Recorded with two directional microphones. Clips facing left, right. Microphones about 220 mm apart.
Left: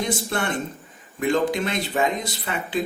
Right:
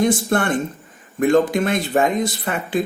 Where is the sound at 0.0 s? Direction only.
50° right (ahead or behind).